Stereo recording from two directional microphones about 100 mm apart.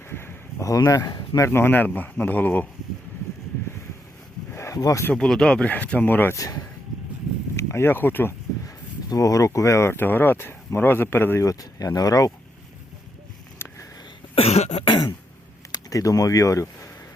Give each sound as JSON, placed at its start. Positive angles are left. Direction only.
{"t": 0.1, "sound": "a sound", "side_deg": 25}
{"t": 0.7, "sound": "speech", "side_deg": 35}
{"t": 1.5, "sound": "speech", "side_deg": 25}
{"t": 4.5, "sound": "a sound", "side_deg": 30}
{"t": 5.1, "sound": "speech", "side_deg": 5}
{"t": 6.3, "sound": "speech", "side_deg": 35}
{"t": 8.6, "sound": "speech", "side_deg": 35}
{"t": 11.4, "sound": "speech", "side_deg": 35}
{"t": 13.6, "sound": "a sound", "side_deg": 25}
{"t": 14.3, "sound": "cough", "side_deg": 90}
{"t": 14.8, "sound": "throat clearing", "side_deg": 55}
{"t": 15.7, "sound": "speech", "side_deg": 35}